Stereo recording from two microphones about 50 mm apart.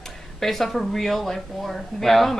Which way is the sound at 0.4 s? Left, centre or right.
Centre.